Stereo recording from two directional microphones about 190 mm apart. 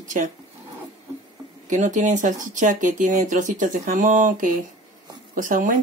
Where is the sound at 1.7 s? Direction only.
40° right (ahead or behind).